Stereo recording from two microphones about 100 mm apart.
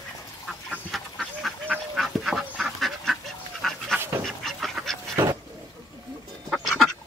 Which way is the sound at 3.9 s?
25° right (ahead or behind).